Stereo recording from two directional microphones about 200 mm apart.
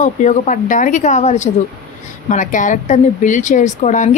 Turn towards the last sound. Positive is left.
turn(degrees=35)  # may be behind; listen again after turning